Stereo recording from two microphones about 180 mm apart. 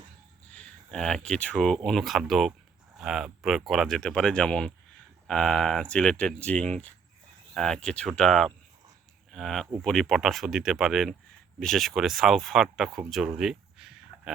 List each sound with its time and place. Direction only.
0.4 s speech: 5° left (ahead or behind)